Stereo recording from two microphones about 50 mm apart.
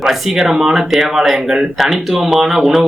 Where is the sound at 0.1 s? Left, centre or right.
Centre.